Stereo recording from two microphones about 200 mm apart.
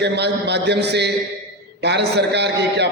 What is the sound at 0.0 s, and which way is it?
A man's voice, 55° right (ahead or behind).